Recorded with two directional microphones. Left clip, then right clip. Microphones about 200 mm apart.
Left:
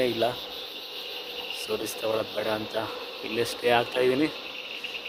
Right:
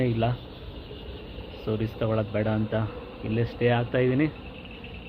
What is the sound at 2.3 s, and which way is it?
Speech, 25° left (ahead or behind).